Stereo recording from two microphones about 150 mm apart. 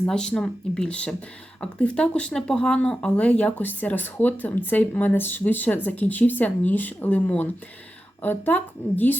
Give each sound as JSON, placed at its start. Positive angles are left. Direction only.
{"t": 0.1, "sound": "speech", "side_deg": 5}